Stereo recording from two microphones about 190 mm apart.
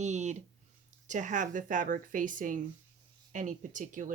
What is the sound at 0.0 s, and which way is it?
Speech, 35° right (ahead or behind).